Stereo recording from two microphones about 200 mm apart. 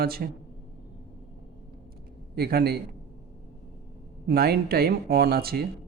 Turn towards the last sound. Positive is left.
turn(degrees=-50)  # may be behind; listen again after turning